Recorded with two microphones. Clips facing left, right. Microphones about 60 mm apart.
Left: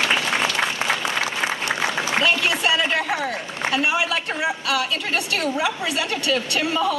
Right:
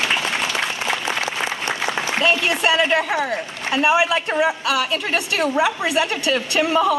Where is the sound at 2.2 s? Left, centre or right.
Right.